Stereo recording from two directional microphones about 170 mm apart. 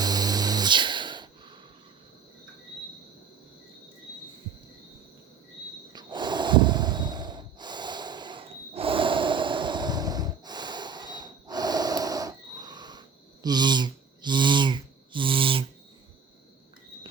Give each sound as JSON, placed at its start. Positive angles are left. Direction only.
{"t": 0.0, "sound": "music", "side_deg": -25}
{"t": 5.9, "sound": "snort", "side_deg": -25}